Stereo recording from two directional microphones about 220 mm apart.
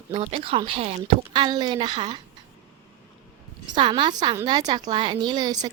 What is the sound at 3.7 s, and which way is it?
A woman's voice, 20° right (ahead or behind).